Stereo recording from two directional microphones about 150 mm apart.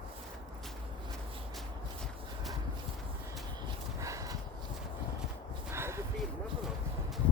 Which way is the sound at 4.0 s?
20° right (ahead or behind).